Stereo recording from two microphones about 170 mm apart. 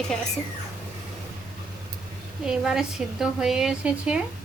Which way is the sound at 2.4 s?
5° right (ahead or behind).